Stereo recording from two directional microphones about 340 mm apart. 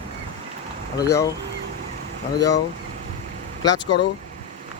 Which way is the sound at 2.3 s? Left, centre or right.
Centre.